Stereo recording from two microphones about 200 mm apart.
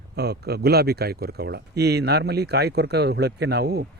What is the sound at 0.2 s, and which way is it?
Speech, 55° right (ahead or behind).